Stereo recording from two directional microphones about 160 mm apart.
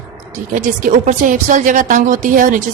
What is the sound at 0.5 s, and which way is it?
A woman's voice, 55° right (ahead or behind).